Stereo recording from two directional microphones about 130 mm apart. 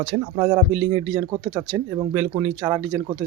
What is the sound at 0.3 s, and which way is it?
Speech, 30° right (ahead or behind).